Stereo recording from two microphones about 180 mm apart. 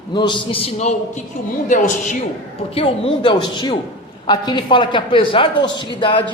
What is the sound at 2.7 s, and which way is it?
A man's voice, 30° left (ahead or behind).